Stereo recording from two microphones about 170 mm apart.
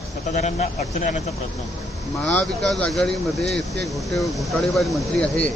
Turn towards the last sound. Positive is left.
turn(degrees=5)  # may be behind; listen again after turning